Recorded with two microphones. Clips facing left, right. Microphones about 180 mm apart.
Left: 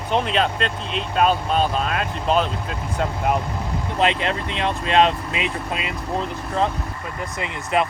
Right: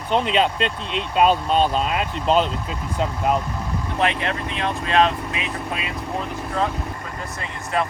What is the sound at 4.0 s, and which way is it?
Speech, 25° left (ahead or behind).